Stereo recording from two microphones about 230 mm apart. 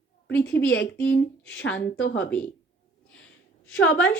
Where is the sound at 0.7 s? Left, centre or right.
Left.